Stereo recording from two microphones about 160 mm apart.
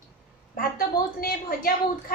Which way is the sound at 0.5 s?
65° left (ahead or behind).